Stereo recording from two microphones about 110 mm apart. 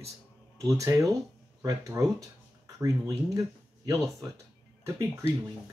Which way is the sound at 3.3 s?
30° right (ahead or behind).